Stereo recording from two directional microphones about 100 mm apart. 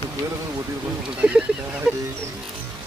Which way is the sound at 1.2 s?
15° right (ahead or behind).